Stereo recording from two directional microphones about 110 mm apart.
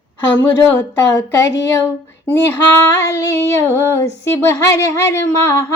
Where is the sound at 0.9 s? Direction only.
25° left (ahead or behind).